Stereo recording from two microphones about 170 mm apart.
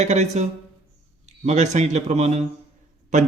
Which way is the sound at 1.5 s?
40° right (ahead or behind).